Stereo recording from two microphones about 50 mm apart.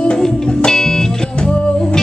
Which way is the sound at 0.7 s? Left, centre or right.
Centre.